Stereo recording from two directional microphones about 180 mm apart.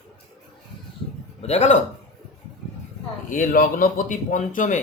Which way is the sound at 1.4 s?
35° left (ahead or behind).